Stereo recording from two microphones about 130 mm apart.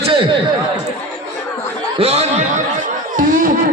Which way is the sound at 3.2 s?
90° right.